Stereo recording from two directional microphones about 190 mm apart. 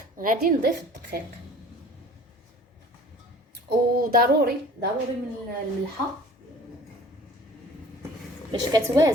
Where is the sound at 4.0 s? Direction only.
50° right (ahead or behind).